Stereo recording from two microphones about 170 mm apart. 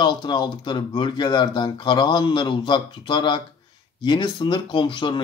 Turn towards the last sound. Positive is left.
turn(degrees=30)  # may be behind; listen again after turning